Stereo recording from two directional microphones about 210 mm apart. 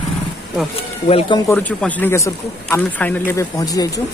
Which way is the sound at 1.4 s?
5° left (ahead or behind).